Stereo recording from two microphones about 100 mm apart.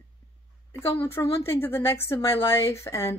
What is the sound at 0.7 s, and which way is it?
Speech, 25° left (ahead or behind).